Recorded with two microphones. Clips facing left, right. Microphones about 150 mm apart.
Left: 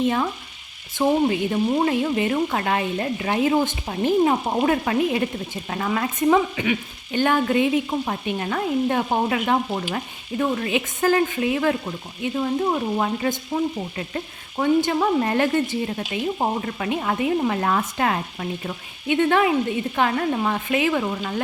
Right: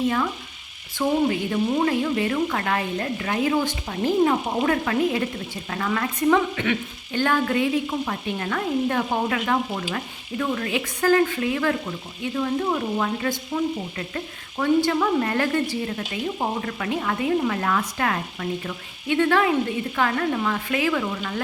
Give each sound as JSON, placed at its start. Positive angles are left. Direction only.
{"t": 1.0, "sound": "frying", "side_deg": 25}
{"t": 13.5, "sound": "frying", "side_deg": 15}
{"t": 14.8, "sound": "frying", "side_deg": 20}